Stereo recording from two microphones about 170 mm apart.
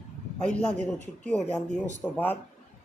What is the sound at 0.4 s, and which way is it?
A man's voice, 5° left (ahead or behind).